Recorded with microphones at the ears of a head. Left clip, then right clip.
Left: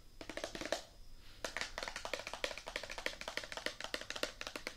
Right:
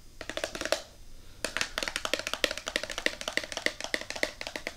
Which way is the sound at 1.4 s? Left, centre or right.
Right.